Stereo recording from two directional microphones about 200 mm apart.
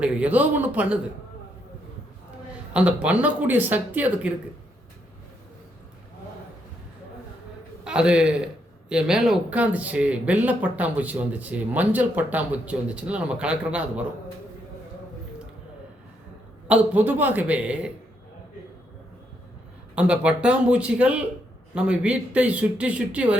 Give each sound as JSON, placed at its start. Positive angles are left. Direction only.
{"t": 0.0, "sound": "speech", "side_deg": -5}
{"t": 2.7, "sound": "speech", "side_deg": -5}
{"t": 7.9, "sound": "speech", "side_deg": -5}
{"t": 16.6, "sound": "speech", "side_deg": -5}
{"t": 20.0, "sound": "speech", "side_deg": -5}